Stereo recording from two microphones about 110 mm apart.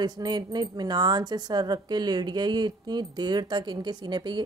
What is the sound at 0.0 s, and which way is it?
Speech, 40° right (ahead or behind).